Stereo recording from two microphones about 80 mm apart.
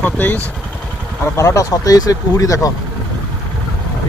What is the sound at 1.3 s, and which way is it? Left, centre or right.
Speech, left.